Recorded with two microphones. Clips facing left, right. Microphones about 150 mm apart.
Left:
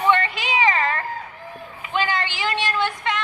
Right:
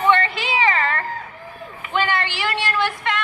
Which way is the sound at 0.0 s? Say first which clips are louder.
Right 2 dB; 15° left (ahead or behind).